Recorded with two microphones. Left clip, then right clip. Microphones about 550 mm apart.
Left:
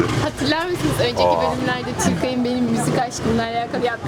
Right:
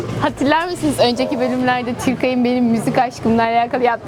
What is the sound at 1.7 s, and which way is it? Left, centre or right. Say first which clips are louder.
A woman's voice: right 4 dB; right.